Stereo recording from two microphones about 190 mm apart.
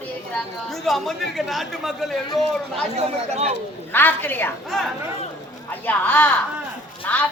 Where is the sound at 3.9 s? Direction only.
10° left (ahead or behind).